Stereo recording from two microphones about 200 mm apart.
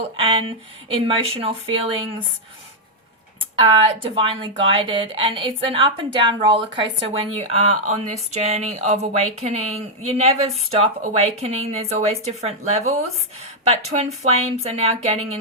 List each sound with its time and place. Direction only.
0.9 s a woman's voice: 25° right (ahead or behind)
3.6 s a woman's voice: 25° right (ahead or behind)